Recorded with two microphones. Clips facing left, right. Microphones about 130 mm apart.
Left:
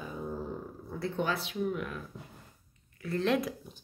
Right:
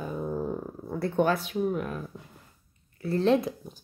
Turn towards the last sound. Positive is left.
turn(degrees=-30)  # may be behind; listen again after turning